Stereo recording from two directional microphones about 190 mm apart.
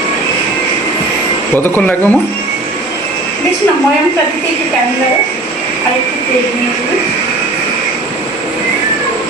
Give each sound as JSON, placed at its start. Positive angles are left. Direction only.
{"t": 1.5, "sound": "speech", "side_deg": 10}